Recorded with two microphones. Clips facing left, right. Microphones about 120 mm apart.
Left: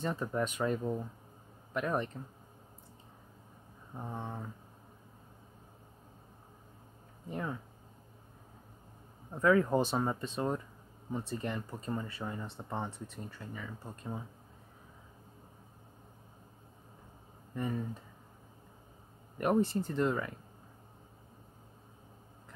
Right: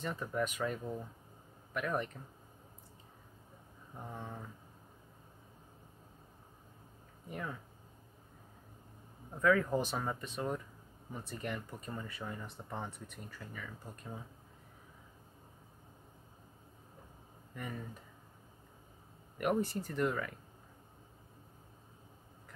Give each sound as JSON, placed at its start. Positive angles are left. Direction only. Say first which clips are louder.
{"t": 0.0, "sound": "speech", "louder": "left 3 dB", "side_deg": 30}
{"t": 3.9, "sound": "speech", "louder": "left 4 dB", "side_deg": 25}
{"t": 7.2, "sound": "speech", "louder": "left 4 dB", "side_deg": 30}
{"t": 9.4, "sound": "speech", "louder": "left 3 dB", "side_deg": 25}
{"t": 19.3, "sound": "speech", "louder": "left 4 dB", "side_deg": 30}